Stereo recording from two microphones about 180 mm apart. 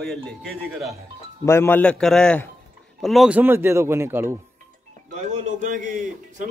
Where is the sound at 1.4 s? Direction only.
15° left (ahead or behind); by 4.4 s 15° right (ahead or behind).